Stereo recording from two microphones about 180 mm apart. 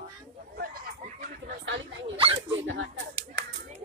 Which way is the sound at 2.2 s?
30° right (ahead or behind).